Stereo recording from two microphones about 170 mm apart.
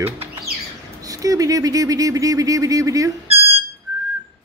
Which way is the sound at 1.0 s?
20° right (ahead or behind).